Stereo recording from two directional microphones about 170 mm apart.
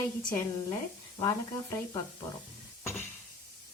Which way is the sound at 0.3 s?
20° left (ahead or behind).